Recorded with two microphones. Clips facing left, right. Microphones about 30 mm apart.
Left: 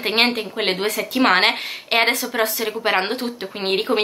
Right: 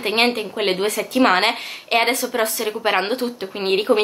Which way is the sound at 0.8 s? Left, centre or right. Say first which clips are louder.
Right 1 dB; left.